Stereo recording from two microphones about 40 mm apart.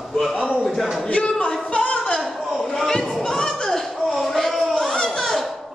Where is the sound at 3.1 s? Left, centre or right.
Centre.